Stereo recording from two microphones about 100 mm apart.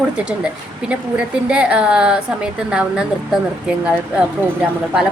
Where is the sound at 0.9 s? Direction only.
10° right (ahead or behind).